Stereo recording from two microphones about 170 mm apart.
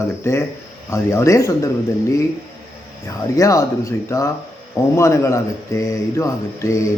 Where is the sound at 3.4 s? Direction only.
20° left (ahead or behind).